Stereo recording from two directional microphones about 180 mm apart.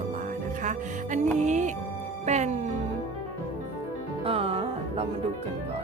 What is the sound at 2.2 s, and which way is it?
Music, 40° right (ahead or behind).